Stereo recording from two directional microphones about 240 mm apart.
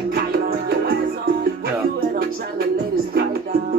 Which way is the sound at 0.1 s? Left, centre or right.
Right.